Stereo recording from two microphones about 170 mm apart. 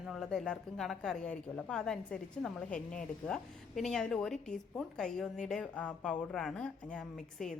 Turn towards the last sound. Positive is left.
turn(degrees=5)  # may be behind; listen again after turning